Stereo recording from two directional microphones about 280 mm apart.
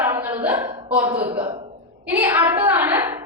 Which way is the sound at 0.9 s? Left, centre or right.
Centre.